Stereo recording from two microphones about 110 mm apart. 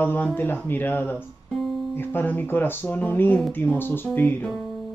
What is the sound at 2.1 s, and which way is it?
Speech, 15° left (ahead or behind).